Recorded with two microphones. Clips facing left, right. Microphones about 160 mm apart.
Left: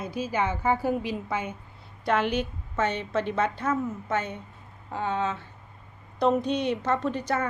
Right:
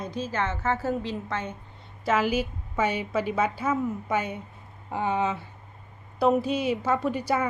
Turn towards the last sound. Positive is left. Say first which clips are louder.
# right 1 dB
turn(degrees=-10)  # may be behind; listen again after turning